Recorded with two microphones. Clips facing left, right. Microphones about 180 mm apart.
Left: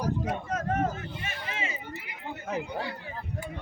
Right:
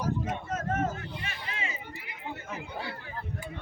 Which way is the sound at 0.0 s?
35° left (ahead or behind).